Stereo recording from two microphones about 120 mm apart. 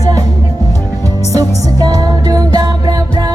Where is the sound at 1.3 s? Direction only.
30° right (ahead or behind).